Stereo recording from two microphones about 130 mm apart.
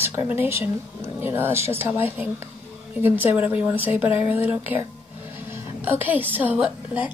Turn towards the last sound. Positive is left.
turn(degrees=-10)  # may be behind; listen again after turning